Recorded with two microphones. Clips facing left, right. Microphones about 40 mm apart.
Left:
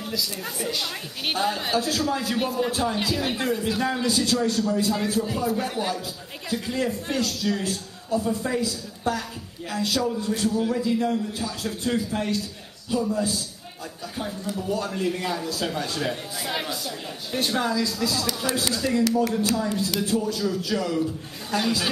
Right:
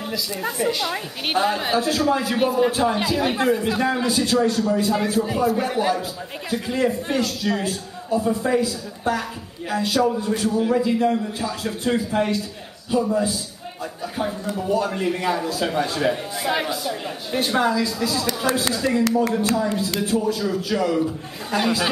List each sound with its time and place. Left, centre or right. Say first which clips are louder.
0.4 s a woman's voice: right 6 dB; centre
2.2 s speech: right 6 dB; centre
3.2 s a woman's voice: right 6 dB; centre
3.5 s a woman's voice: right 4 dB; right
14.5 s speech: right 4 dB; right